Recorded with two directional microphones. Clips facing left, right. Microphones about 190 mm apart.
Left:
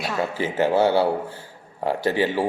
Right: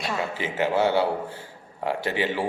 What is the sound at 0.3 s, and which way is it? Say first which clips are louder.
A man's voice: left 4 dB; 35° left (ahead or behind).